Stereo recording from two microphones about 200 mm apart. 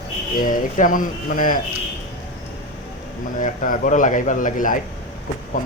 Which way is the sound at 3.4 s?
40° left (ahead or behind).